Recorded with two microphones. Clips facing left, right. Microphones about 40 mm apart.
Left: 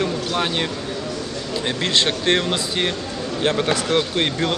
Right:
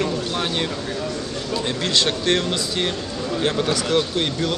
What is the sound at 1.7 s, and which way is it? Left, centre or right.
Speech, left.